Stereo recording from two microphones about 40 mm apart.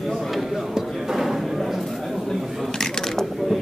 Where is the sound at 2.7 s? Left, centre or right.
Centre.